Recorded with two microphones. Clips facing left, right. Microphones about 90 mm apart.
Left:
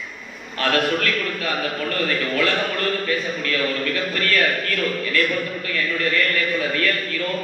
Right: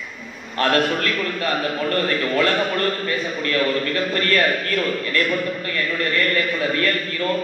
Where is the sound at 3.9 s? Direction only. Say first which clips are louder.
Right 2 dB; 35° right (ahead or behind).